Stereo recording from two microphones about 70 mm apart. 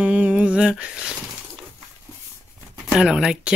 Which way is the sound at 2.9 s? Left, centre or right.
Centre.